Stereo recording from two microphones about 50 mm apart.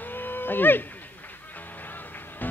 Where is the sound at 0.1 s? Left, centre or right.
Left.